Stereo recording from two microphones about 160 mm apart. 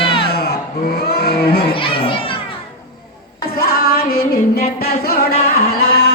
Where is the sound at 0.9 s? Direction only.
80° left.